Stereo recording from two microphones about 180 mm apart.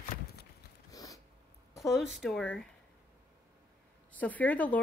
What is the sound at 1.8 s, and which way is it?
Speech, centre (ahead or behind).